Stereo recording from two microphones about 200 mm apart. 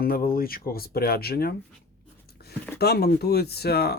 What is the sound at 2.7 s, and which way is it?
Speech, 55° left (ahead or behind).